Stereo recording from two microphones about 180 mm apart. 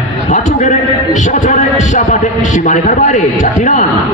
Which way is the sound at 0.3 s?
45° left (ahead or behind).